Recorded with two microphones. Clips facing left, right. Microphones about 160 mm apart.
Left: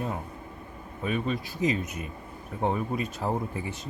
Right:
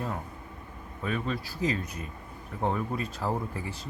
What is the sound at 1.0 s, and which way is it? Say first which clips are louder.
Speech: left 2 dB; 15° left (ahead or behind).